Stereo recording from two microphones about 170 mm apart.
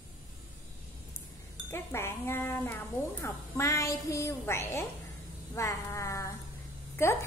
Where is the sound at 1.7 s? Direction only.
15° left (ahead or behind).